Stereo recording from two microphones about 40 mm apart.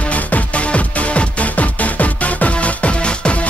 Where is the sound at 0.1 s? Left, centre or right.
Left.